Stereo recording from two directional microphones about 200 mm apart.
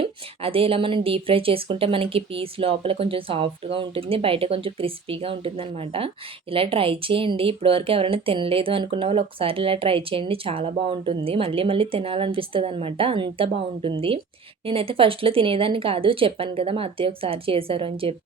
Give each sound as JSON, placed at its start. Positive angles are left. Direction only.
{"t": 0.0, "sound": "a woman's voice", "side_deg": -30}